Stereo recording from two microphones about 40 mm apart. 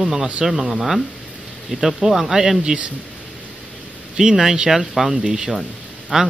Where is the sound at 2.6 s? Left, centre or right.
Right.